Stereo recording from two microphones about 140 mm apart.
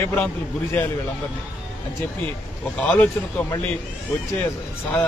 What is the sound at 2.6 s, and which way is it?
Speech, 10° left (ahead or behind).